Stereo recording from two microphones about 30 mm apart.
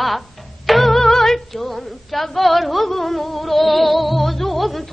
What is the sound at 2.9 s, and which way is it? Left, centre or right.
Music, centre.